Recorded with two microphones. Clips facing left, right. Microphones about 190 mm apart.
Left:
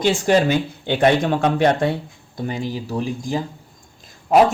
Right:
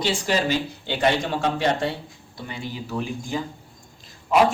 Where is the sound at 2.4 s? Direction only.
45° left (ahead or behind).